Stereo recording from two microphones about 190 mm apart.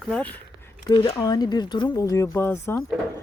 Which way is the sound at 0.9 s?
20° left (ahead or behind).